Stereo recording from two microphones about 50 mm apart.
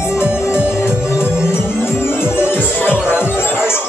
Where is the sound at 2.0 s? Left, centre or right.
Left.